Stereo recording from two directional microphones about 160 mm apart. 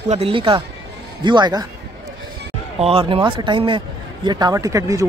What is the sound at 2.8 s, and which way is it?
Speech, 35° right (ahead or behind).